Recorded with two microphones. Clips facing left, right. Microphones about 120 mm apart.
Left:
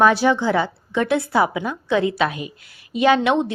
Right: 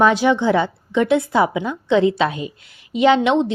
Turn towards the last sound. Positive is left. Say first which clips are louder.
# right 2 dB
turn(degrees=-20)  # may be behind; listen again after turning